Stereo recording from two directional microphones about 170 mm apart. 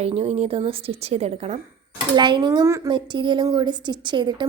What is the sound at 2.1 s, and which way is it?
A woman's voice, 25° right (ahead or behind).